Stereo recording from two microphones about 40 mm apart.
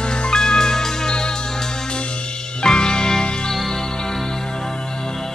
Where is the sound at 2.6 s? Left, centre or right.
Left.